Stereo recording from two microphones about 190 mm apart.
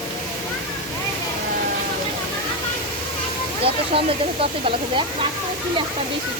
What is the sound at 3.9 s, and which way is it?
Speech, 30° right (ahead or behind).